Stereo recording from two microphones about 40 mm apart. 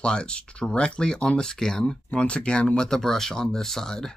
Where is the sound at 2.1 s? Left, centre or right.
Left; by 4.1 s centre.